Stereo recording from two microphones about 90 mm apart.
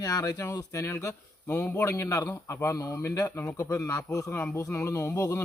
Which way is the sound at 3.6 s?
35° left (ahead or behind).